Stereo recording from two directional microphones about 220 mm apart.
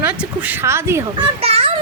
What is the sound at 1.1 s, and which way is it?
Speech, 25° right (ahead or behind).